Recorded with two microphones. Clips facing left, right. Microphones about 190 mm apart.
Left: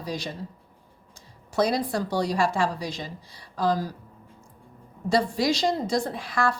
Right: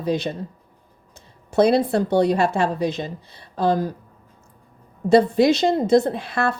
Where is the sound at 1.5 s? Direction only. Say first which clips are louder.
Right 7 dB; 25° right (ahead or behind).